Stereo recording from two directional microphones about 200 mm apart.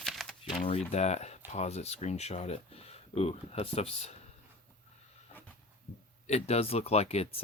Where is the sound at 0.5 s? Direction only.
35° left (ahead or behind).